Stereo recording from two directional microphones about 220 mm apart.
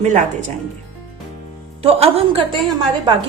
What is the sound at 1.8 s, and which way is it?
Speech, 25° right (ahead or behind).